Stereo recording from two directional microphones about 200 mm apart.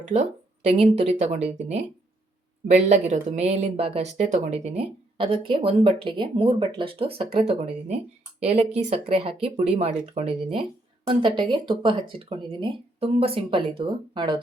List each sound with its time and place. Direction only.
0.0 s speech: 35° right (ahead or behind)